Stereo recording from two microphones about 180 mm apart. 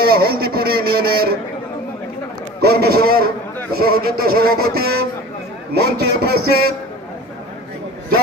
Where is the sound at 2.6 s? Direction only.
60° right (ahead or behind).